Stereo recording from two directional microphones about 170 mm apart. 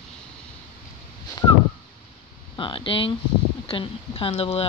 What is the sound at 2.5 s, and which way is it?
Speech, 30° left (ahead or behind).